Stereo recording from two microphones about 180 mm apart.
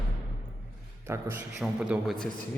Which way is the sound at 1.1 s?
15° right (ahead or behind).